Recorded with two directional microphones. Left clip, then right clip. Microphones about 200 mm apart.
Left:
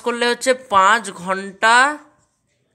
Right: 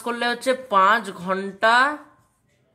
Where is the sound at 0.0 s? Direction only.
15° left (ahead or behind).